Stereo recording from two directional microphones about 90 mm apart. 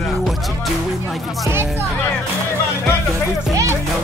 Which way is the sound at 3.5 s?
35° right (ahead or behind).